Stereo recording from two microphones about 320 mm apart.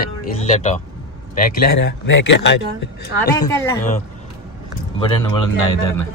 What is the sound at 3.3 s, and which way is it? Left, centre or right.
Speech, centre.